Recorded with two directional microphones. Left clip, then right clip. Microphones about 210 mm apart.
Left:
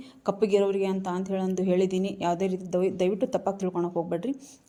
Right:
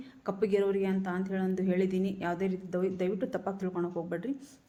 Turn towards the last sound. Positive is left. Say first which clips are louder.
# left 6 dB
turn(degrees=25)  # may be behind; listen again after turning